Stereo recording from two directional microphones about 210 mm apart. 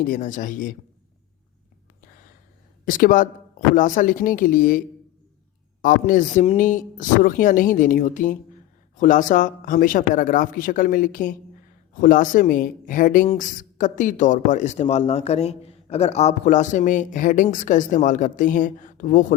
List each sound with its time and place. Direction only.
0.0 s speech: 40° left (ahead or behind)
2.8 s speech: 40° left (ahead or behind)
5.8 s speech: 40° left (ahead or behind)